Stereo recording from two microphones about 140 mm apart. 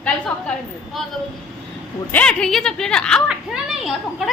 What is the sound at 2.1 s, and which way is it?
A woman's voice, 10° left (ahead or behind).